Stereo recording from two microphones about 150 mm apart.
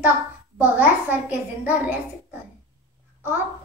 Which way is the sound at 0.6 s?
10° right (ahead or behind).